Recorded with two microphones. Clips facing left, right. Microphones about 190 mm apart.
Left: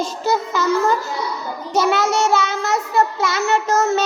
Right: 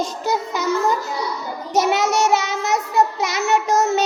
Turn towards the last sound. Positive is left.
turn(degrees=-15)  # may be behind; listen again after turning